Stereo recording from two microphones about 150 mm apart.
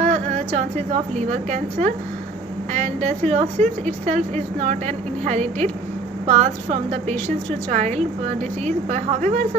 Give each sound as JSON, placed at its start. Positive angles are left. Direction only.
{"t": 0.0, "sound": "a woman's voice", "side_deg": -50}